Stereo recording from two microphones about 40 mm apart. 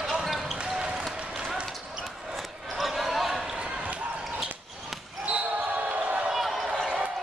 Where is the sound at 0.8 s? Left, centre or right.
Right.